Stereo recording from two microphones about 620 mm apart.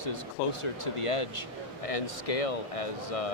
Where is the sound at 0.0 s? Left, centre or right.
Left.